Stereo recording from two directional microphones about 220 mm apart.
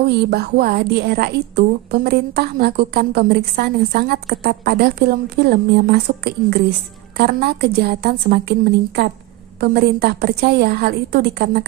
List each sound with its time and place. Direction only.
0.3 s a woman's voice: 45° right (ahead or behind)